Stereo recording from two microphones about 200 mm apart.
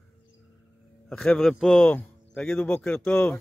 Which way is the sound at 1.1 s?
5° left (ahead or behind).